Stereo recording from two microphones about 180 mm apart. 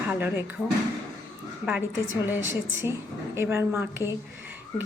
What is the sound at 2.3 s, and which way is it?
A woman's voice, 10° right (ahead or behind).